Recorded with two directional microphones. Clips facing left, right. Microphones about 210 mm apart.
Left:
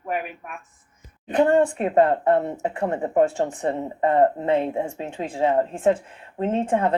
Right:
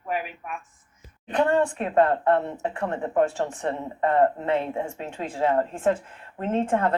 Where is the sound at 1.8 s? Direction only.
20° left (ahead or behind).